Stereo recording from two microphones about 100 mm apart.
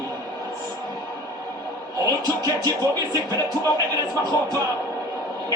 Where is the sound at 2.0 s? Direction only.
35° right (ahead or behind).